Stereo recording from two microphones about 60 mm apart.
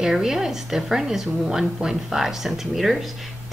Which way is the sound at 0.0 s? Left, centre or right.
Centre.